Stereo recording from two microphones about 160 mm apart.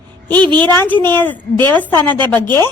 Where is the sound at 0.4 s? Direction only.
30° right (ahead or behind).